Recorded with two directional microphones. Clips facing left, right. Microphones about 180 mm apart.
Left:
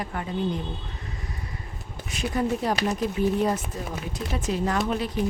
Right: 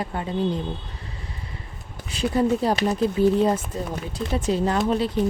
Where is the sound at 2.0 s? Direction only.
30° right (ahead or behind).